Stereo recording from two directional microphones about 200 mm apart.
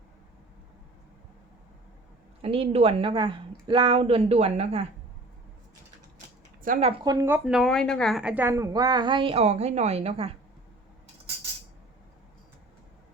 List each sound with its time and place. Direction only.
2.4 s speech: 30° right (ahead or behind)
6.6 s speech: 35° right (ahead or behind)
7.0 s speech: 20° right (ahead or behind)